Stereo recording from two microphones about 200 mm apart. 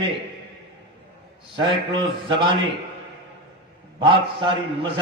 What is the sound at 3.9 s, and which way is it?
Speech, 25° right (ahead or behind).